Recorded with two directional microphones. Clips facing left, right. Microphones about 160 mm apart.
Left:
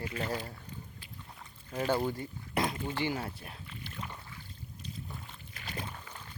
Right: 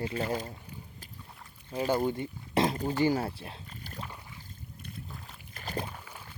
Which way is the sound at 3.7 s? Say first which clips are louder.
Even; 40° right (ahead or behind).